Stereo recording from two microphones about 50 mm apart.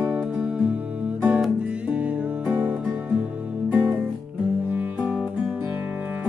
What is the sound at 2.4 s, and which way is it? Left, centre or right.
Music, right.